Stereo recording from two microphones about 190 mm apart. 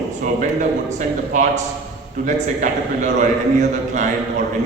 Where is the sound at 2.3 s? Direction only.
40° right (ahead or behind).